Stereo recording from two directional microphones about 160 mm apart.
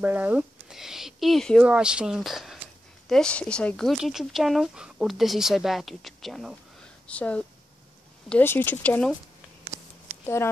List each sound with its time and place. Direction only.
0.0 s speech: 10° right (ahead or behind); by 9.1 s 10° left (ahead or behind)
10.2 s speech: 15° left (ahead or behind)